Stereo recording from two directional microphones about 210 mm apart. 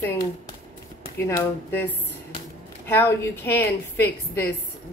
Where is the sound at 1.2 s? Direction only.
10° left (ahead or behind).